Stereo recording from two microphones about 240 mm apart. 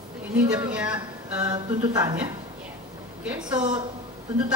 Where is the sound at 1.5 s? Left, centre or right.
Centre.